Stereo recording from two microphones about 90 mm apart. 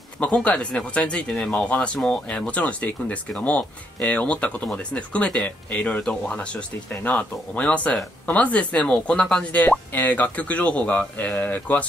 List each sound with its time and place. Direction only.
0.2 s speech: 15° left (ahead or behind)